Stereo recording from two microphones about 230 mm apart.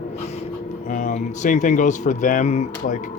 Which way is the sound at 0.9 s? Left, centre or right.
Left.